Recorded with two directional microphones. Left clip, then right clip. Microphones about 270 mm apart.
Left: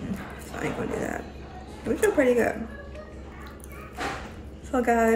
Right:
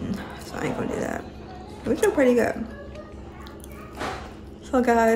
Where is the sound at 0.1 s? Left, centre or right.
Centre.